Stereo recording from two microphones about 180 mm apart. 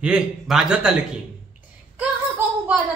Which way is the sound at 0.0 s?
5° right (ahead or behind).